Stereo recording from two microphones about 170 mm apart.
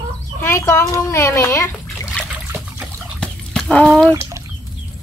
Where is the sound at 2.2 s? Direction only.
5° left (ahead or behind).